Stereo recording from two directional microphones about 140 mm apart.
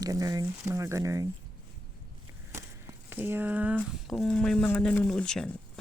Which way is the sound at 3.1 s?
15° right (ahead or behind).